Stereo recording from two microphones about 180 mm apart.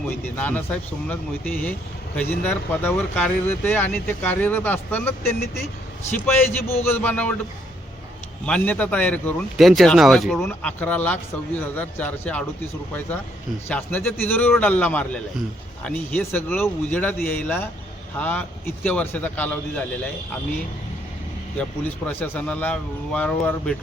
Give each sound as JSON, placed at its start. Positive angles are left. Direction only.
{"t": 0.3, "sound": "speech", "side_deg": 10}
{"t": 8.4, "sound": "speech", "side_deg": 5}
{"t": 13.7, "sound": "speech", "side_deg": 10}
{"t": 21.6, "sound": "speech", "side_deg": 10}